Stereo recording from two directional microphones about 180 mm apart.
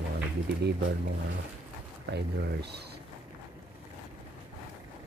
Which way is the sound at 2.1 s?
70° right (ahead or behind).